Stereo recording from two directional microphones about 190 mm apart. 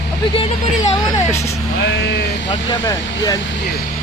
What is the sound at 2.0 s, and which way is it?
Speech, 60° left (ahead or behind).